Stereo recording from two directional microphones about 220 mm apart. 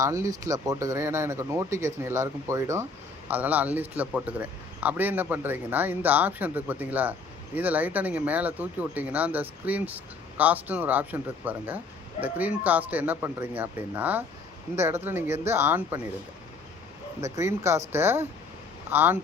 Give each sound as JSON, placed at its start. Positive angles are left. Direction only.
{"t": 0.0, "sound": "speech", "side_deg": -15}
{"t": 17.2, "sound": "speech", "side_deg": -15}